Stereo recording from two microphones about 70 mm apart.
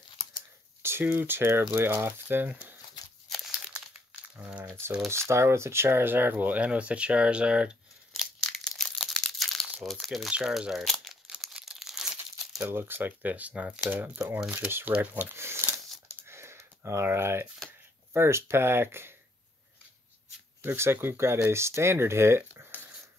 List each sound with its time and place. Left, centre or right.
0.8 s speech: right
4.2 s crumpling: centre
4.6 s speech: right; by 7.7 s centre
8.1 s crumpling: centre
10.0 s speech: centre
10.8 s crumpling: centre
12.6 s speech: right
14.5 s speech: right
15.3 s a sound: right
18.1 s speech: right
20.6 s speech: right
22.7 s a sound: left